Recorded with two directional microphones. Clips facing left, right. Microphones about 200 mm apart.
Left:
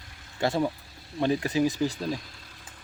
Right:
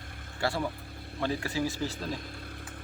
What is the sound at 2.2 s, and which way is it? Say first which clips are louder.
Music: right 6 dB; 55° right (ahead or behind).